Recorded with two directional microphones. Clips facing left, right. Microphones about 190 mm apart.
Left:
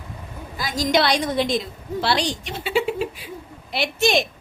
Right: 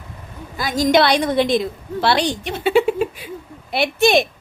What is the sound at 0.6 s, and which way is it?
A woman's voice, 55° right (ahead or behind).